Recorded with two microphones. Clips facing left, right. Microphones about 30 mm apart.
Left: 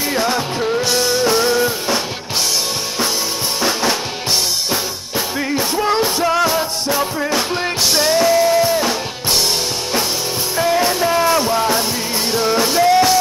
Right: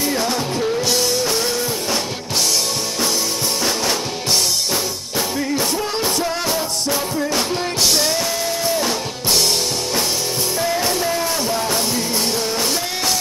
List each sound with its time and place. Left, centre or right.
0.1 s music: left
6.4 s music: centre
7.0 s music: left
7.5 s music: centre
12.4 s music: centre